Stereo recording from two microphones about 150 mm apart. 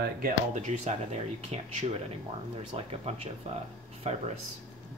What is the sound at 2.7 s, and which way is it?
Speech, 40° right (ahead or behind).